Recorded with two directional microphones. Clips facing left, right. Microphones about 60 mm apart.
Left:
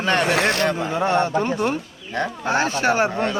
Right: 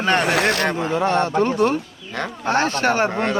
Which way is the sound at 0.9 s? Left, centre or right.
Centre.